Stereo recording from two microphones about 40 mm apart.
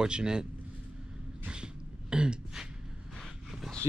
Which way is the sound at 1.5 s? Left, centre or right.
Right.